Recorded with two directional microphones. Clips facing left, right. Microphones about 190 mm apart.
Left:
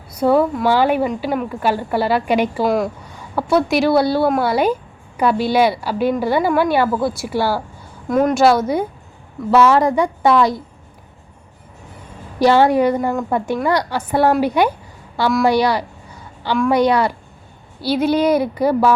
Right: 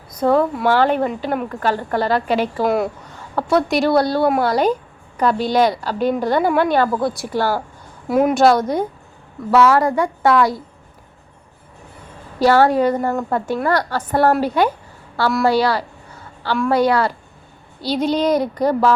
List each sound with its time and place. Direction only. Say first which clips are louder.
0.1 s a woman's voice: left 1 dB; 10° left (ahead or behind)
1.0 s a woman's voice: left 1 dB; centre (ahead or behind)
2.6 s a woman's voice: right 1 dB; centre (ahead or behind)
3.1 s a woman's voice: left 1 dB; 10° left (ahead or behind)
8.0 s a woman's voice: even; 5° right (ahead or behind)
9.6 s a woman's voice: left 1 dB; 15° left (ahead or behind)
12.4 s a woman's voice: left 1 dB; 15° left (ahead or behind)
15.4 s a sound: left 1 dB; 15° left (ahead or behind)
16.6 s a woman's voice: left 1 dB; 15° left (ahead or behind)